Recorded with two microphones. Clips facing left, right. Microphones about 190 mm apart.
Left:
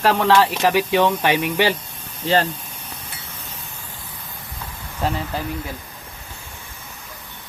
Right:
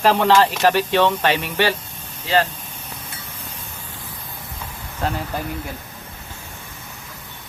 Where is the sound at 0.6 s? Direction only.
10° left (ahead or behind).